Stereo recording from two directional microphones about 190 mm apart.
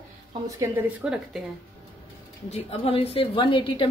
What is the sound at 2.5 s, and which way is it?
A woman's voice, 30° left (ahead or behind).